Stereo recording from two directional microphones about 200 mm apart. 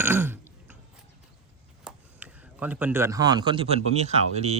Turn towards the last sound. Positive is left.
turn(degrees=-35)  # may be behind; listen again after turning